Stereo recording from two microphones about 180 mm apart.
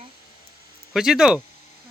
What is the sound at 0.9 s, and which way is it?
Speech, centre (ahead or behind).